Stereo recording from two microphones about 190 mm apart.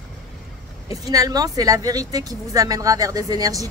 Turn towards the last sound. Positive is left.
turn(degrees=-20)  # may be behind; listen again after turning